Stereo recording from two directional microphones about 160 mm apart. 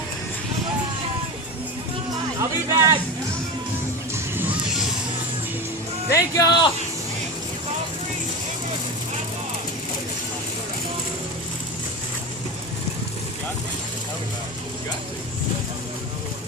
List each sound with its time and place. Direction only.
2.4 s speech: 20° right (ahead or behind)
4.1 s music: 15° right (ahead or behind)
6.1 s speech: 20° left (ahead or behind)